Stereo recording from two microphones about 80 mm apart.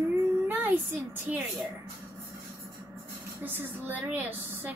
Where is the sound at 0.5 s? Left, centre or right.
Right.